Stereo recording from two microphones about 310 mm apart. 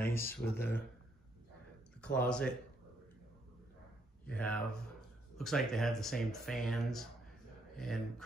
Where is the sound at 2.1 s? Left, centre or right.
Centre.